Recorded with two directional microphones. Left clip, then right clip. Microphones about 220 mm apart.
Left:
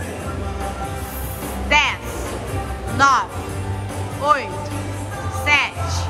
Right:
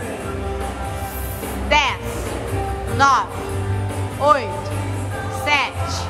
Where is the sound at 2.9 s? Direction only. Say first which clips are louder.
Even; 5° right (ahead or behind).